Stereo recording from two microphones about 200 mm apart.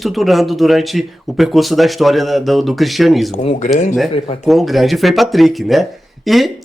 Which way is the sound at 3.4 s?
35° left (ahead or behind).